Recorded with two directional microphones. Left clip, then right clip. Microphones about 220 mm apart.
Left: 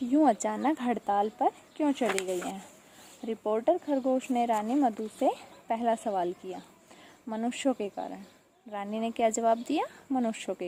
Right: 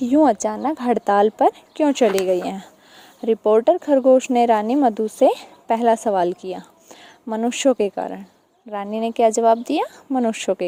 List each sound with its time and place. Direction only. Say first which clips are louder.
0.1 s speech: right 9 dB; 30° right (ahead or behind)